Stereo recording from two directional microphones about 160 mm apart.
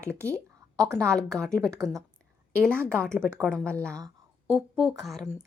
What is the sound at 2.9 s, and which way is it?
A woman's voice, 5° left (ahead or behind).